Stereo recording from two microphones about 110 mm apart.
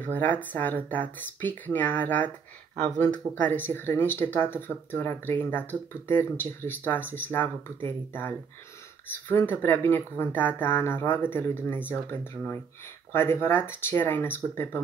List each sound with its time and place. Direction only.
0.0 s speech: 15° left (ahead or behind)